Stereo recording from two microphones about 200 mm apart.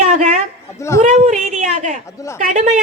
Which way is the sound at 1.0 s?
35° right (ahead or behind).